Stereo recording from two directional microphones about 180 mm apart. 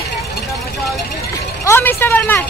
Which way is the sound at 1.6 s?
15° left (ahead or behind).